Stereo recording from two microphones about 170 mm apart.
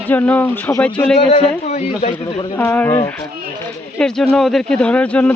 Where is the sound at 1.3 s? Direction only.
45° left (ahead or behind).